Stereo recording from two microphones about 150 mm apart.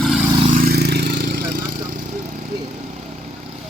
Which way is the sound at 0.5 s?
85° right.